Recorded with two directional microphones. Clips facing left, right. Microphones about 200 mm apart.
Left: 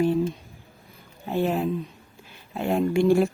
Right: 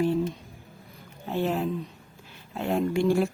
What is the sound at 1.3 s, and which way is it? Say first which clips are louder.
A woman's voice: left 3 dB; 10° left (ahead or behind).